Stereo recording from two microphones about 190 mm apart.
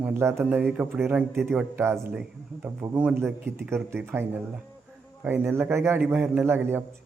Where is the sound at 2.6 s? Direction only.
10° right (ahead or behind).